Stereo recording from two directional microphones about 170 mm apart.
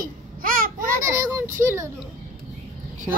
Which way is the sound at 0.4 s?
55° right (ahead or behind).